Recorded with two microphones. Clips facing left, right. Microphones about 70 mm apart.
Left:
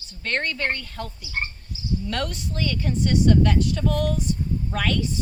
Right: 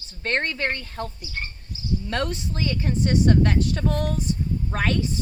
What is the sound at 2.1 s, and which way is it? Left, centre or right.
A woman's voice, right.